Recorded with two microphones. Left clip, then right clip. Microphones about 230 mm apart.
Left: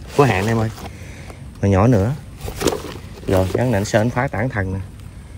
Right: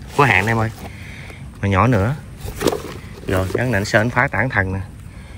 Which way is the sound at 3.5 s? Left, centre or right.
Centre.